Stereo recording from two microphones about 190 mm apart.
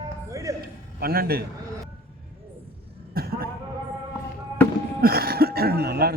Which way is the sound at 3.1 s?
55° right (ahead or behind).